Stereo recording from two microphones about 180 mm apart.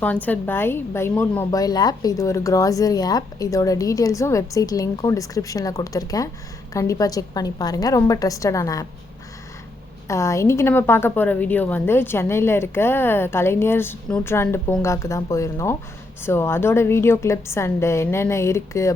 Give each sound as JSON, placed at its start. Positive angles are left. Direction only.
{"t": 0.0, "sound": "a woman's voice", "side_deg": 10}
{"t": 1.5, "sound": "speech", "side_deg": 20}
{"t": 10.1, "sound": "a woman's voice", "side_deg": 15}